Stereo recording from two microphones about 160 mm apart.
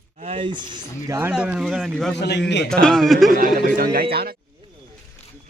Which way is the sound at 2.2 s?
90° left.